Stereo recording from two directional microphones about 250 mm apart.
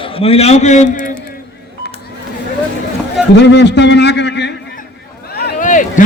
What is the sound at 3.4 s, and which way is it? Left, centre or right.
A man's voice, left.